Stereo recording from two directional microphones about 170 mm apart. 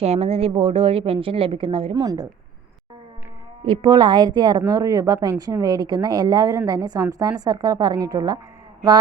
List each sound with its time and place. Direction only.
0.0 s a woman's voice: 35° right (ahead or behind)
3.6 s a woman's voice: 30° right (ahead or behind)